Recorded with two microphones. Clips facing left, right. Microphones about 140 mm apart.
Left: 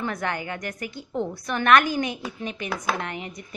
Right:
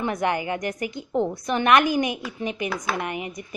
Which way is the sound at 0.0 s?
15° right (ahead or behind).